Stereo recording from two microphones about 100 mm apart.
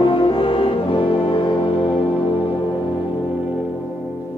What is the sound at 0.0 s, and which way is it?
French horn, 60° left (ahead or behind).